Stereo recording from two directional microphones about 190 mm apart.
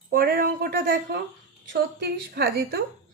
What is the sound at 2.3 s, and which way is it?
Speech, 55° right (ahead or behind).